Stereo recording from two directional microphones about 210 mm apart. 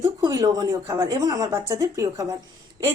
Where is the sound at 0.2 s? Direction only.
15° right (ahead or behind).